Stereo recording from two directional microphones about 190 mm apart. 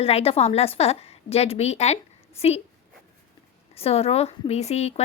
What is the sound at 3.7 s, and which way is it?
A woman's voice, 30° left (ahead or behind).